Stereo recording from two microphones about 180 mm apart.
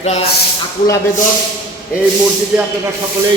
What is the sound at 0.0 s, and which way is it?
Speech, 35° left (ahead or behind).